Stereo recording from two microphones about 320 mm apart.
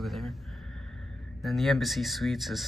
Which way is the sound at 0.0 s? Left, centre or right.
Centre.